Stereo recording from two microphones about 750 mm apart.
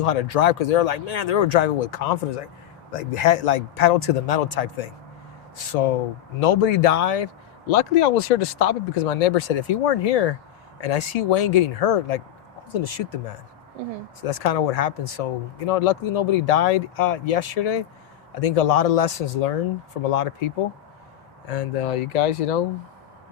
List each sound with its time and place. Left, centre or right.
0.0 s speech: left
7.7 s speech: left